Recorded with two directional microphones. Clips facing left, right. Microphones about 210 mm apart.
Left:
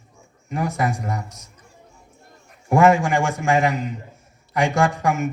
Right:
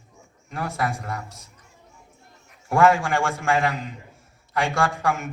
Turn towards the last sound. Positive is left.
turn(degrees=20)  # may be behind; listen again after turning